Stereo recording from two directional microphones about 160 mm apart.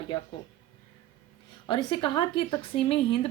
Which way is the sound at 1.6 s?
30° left (ahead or behind).